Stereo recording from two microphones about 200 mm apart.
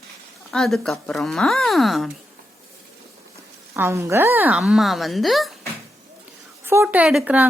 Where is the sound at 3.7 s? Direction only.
10° right (ahead or behind).